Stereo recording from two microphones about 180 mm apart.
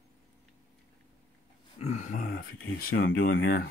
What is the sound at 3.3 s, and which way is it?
Speech, 70° left (ahead or behind).